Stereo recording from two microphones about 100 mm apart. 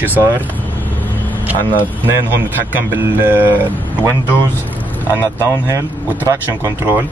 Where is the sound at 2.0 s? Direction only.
20° right (ahead or behind).